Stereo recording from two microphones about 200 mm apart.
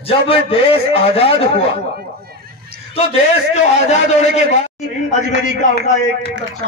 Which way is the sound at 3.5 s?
35° left (ahead or behind).